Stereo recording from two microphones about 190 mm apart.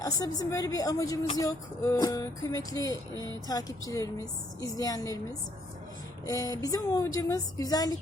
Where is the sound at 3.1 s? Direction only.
20° right (ahead or behind).